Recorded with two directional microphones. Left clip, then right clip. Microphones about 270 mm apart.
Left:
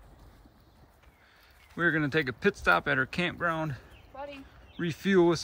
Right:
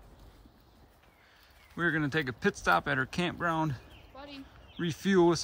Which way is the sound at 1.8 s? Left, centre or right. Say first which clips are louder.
Left 3 dB; centre.